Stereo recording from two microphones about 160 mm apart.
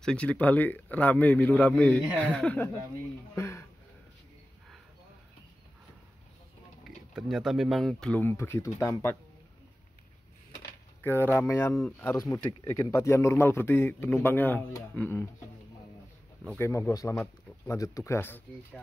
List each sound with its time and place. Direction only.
0.0 s a man's voice: 5° left (ahead or behind)
3.3 s a sound: 15° left (ahead or behind)
7.2 s speech: centre (ahead or behind); by 8.9 s 15° left (ahead or behind)
11.0 s a man's voice: 15° left (ahead or behind)
16.5 s a man's voice: 15° left (ahead or behind)